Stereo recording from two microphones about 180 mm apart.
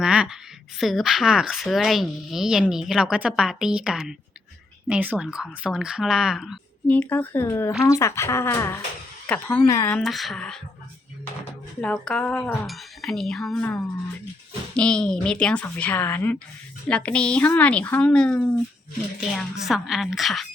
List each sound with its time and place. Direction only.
0.0 s speech: 5° right (ahead or behind)
6.8 s speech: 10° left (ahead or behind)
10.0 s speech: centre (ahead or behind)
11.8 s speech: 5° left (ahead or behind)